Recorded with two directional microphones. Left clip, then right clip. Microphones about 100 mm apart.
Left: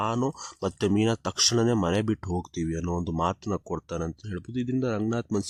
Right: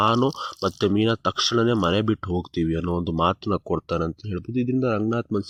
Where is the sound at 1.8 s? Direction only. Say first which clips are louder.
Right 5 dB; 5° right (ahead or behind).